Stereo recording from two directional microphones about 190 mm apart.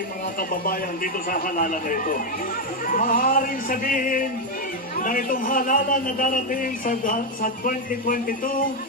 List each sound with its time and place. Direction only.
0.4 s a man's voice: 50° left (ahead or behind)